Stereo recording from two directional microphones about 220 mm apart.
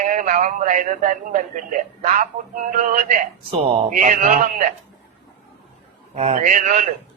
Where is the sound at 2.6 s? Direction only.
35° right (ahead or behind).